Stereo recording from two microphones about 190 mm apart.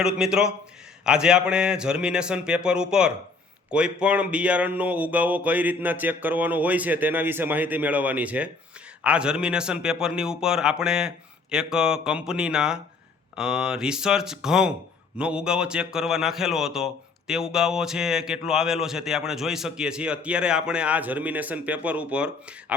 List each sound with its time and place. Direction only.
0.0 s a man's voice: 5° right (ahead or behind)